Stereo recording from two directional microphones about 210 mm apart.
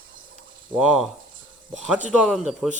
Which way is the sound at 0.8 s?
Centre (ahead or behind).